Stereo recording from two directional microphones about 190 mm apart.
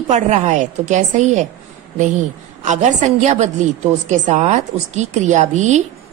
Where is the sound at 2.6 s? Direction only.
40° right (ahead or behind).